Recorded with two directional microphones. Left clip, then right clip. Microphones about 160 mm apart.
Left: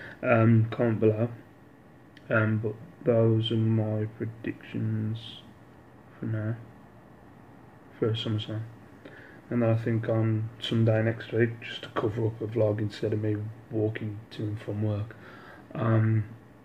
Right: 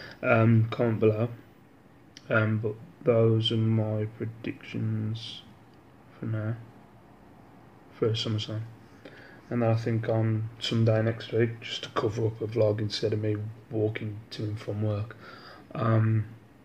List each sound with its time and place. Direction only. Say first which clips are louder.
0.0 s speech: even; centre (ahead or behind)
8.0 s speech: right 1 dB; centre (ahead or behind)